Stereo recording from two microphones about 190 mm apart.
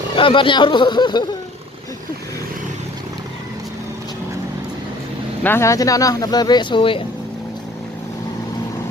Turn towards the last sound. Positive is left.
turn(degrees=25)  # may be behind; listen again after turning